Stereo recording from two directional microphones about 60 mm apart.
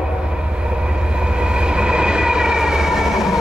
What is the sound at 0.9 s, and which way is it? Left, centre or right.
Train, centre.